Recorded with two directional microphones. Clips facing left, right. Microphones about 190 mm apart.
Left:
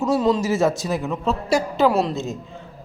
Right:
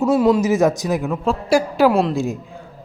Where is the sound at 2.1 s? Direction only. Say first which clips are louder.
Right 5 dB; 10° right (ahead or behind).